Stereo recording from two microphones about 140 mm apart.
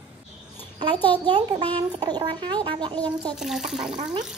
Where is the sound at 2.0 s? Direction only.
30° right (ahead or behind).